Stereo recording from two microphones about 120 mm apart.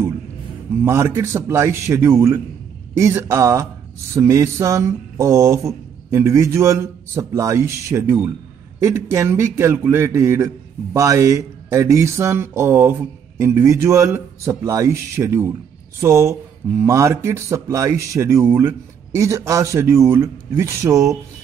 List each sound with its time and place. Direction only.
0.8 s speech: 25° right (ahead or behind)